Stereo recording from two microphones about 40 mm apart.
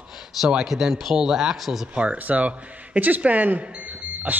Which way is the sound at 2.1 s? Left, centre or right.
Right.